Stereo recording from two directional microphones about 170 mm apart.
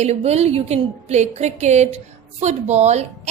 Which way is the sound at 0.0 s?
40° right (ahead or behind).